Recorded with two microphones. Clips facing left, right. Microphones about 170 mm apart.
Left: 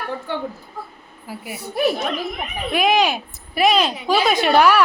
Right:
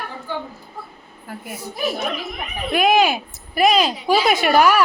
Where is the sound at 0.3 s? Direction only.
65° left (ahead or behind).